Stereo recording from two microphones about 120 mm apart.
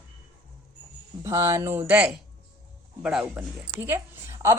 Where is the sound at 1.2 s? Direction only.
25° right (ahead or behind).